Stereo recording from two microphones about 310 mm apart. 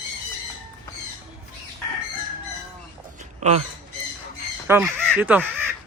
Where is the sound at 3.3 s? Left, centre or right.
Right.